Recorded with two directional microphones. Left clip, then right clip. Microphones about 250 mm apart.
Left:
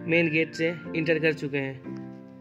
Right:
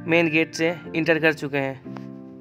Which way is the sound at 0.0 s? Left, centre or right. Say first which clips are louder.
Right 4 dB; right.